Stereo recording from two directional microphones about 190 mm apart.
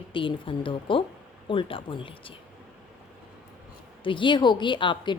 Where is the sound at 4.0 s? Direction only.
25° left (ahead or behind).